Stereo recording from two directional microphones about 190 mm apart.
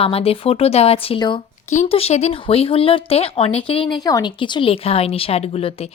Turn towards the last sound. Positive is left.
turn(degrees=30)  # may be behind; listen again after turning